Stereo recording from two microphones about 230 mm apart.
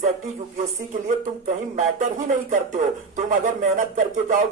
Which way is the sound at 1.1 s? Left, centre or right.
Right.